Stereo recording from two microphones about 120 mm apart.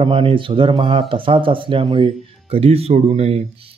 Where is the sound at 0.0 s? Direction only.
50° right (ahead or behind).